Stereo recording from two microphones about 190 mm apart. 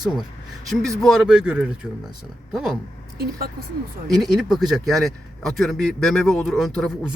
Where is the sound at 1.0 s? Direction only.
Centre (ahead or behind).